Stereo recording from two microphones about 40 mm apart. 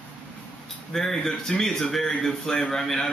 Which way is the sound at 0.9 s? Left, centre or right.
Centre.